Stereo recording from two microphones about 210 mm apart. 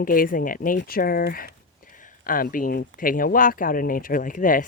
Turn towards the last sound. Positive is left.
turn(degrees=40)  # may be behind; listen again after turning